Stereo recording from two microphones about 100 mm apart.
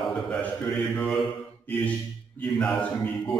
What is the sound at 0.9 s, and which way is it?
Speech, centre (ahead or behind).